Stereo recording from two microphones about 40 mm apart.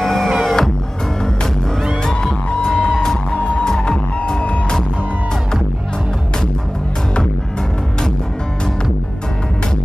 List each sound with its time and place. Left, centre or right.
0.0 s music: centre
2.0 s music: centre